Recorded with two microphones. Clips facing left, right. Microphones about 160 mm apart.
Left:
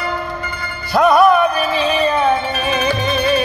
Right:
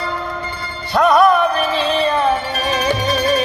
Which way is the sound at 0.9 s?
5° left (ahead or behind).